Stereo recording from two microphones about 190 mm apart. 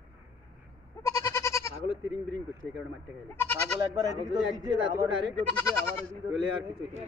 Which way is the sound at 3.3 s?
10° left (ahead or behind).